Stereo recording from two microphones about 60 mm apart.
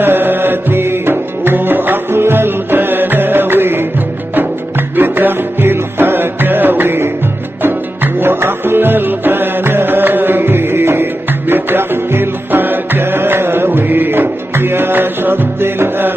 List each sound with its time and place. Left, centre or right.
0.0 s music: right